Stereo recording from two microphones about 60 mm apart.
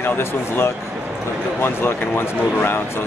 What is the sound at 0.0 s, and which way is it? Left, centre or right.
Speech, left.